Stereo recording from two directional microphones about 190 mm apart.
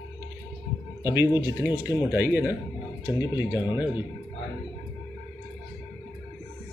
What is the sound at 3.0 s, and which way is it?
Speech, 20° left (ahead or behind).